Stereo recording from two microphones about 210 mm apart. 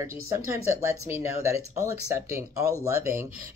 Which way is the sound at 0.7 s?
10° right (ahead or behind).